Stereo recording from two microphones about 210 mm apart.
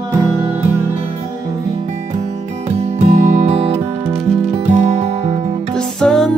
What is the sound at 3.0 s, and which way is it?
Music, 35° right (ahead or behind).